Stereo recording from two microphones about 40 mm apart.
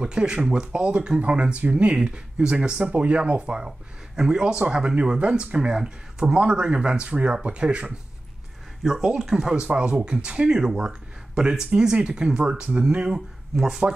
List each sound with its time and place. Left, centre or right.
0.0 s speech: right
2.8 s speech: right
8.8 s speech: centre
9.8 s speech: right